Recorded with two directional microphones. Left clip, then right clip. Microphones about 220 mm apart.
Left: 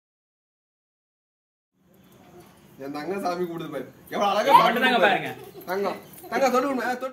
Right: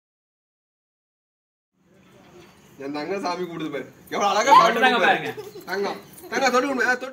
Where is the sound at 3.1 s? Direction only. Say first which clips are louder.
Left 1 dB; 15° left (ahead or behind).